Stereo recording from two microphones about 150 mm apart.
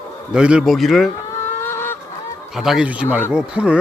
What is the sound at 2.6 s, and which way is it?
Speech, 5° right (ahead or behind).